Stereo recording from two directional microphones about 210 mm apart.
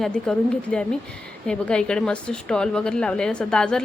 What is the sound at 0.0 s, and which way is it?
A woman's voice, 5° left (ahead or behind).